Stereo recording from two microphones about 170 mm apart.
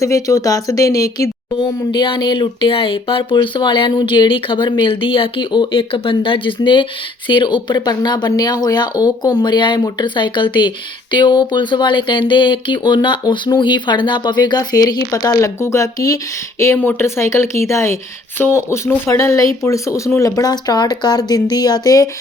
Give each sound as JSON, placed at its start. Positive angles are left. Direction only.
{"t": 0.0, "sound": "speech", "side_deg": 20}